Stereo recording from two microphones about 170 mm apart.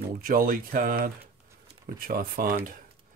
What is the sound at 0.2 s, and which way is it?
Speech, 55° right (ahead or behind).